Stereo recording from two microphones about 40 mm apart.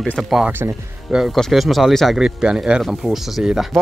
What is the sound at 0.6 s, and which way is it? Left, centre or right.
Speech, right.